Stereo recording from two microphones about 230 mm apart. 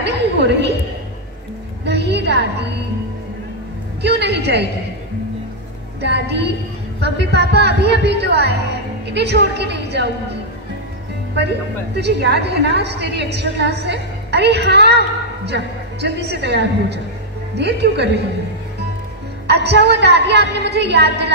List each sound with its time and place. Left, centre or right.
0.0 s a sound: right
1.9 s a woman's voice: right
4.0 s a woman's voice: right
5.9 s a woman's voice: right
11.3 s a woman's voice: right
19.4 s a woman's voice: right